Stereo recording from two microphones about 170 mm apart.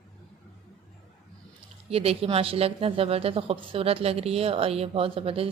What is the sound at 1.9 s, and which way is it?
Speech, 35° right (ahead or behind).